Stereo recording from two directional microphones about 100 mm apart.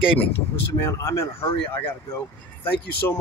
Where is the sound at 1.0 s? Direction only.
25° left (ahead or behind).